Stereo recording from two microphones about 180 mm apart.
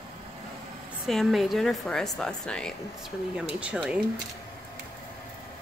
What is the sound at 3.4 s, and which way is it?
Speech, 5° right (ahead or behind).